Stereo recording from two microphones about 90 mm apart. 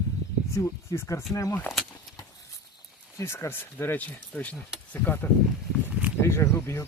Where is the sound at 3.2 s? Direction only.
30° left (ahead or behind).